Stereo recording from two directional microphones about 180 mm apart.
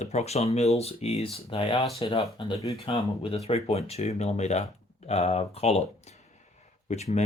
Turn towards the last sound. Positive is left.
turn(degrees=35)  # may be behind; listen again after turning